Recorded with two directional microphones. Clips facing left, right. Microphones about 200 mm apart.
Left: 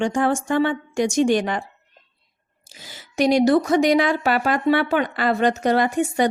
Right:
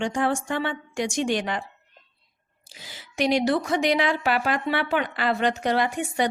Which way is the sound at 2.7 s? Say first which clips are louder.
Left 5 dB; 45° left (ahead or behind).